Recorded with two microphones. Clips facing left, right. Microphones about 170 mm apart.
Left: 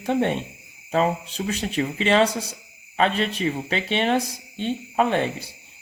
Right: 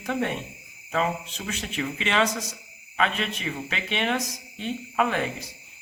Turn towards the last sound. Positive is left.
turn(degrees=30)  # may be behind; listen again after turning